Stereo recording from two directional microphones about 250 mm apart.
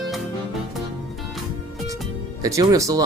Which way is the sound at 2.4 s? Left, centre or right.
Centre.